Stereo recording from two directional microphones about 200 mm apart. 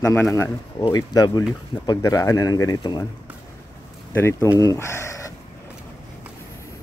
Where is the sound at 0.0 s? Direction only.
10° left (ahead or behind).